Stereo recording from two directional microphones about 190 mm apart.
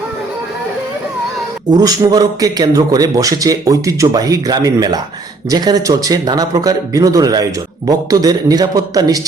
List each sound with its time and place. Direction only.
1.7 s a man's voice: 20° right (ahead or behind)